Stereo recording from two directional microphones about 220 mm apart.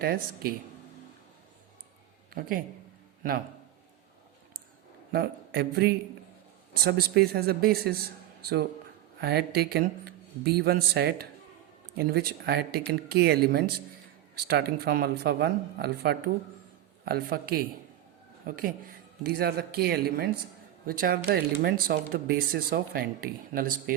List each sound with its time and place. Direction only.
0.0 s speech: 45° right (ahead or behind)
2.3 s speech: 40° right (ahead or behind)
5.1 s speech: 45° right (ahead or behind)